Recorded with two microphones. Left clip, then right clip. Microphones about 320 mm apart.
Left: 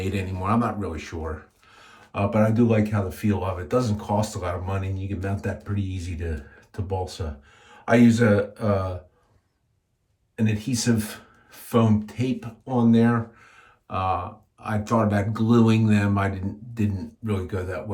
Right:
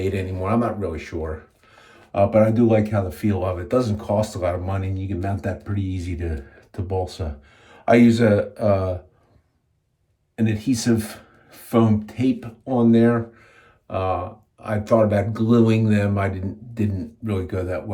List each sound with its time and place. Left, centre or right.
0.0 s speech: centre
10.3 s speech: centre